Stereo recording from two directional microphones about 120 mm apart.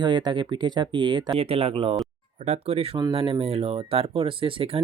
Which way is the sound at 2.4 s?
65° right (ahead or behind).